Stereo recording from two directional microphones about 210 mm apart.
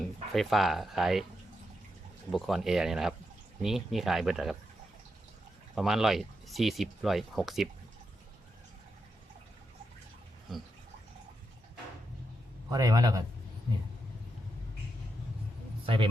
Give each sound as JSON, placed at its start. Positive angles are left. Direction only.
{"t": 0.0, "sound": "speech", "side_deg": 0}
{"t": 2.3, "sound": "speech", "side_deg": 0}
{"t": 5.7, "sound": "speech", "side_deg": 0}
{"t": 12.7, "sound": "a man's voice", "side_deg": -20}
{"t": 15.9, "sound": "speech", "side_deg": -25}